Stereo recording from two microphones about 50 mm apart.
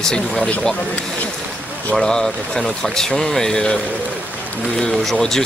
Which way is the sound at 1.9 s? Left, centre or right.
Centre.